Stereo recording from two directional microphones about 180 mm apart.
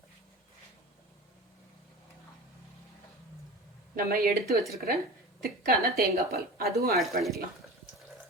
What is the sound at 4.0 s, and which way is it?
Speech, 55° right (ahead or behind).